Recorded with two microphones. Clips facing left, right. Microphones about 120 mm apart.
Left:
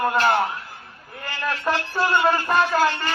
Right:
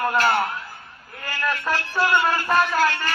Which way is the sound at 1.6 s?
20° left (ahead or behind).